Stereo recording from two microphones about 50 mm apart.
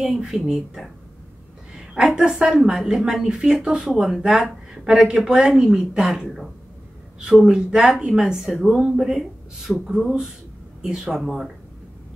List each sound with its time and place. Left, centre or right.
0.0 s speech: centre
2.0 s speech: centre
6.2 s speech: centre
7.2 s speech: centre
11.1 s speech: centre